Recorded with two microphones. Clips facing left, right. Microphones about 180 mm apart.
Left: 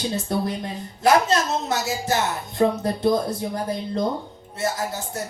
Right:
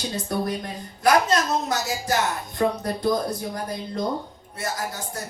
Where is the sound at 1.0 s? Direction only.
25° left (ahead or behind).